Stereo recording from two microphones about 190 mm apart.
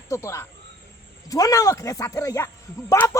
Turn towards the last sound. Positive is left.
turn(degrees=15)  # may be behind; listen again after turning